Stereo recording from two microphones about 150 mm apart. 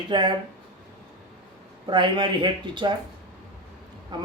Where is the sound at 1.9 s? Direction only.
30° right (ahead or behind).